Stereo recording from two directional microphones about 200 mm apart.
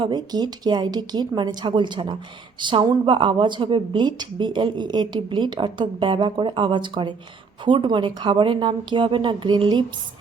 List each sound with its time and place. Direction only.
0.0 s a woman's voice: 20° right (ahead or behind)